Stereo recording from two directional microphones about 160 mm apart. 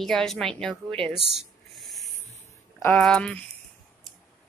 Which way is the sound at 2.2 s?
15° left (ahead or behind).